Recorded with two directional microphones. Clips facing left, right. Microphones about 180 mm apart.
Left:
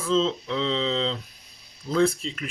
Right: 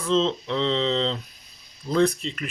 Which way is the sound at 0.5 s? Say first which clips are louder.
Right 3 dB; 10° left (ahead or behind).